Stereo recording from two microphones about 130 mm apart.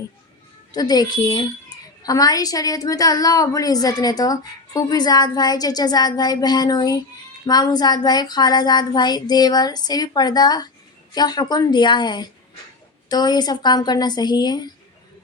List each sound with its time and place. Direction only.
0.7 s a woman's voice: 30° left (ahead or behind)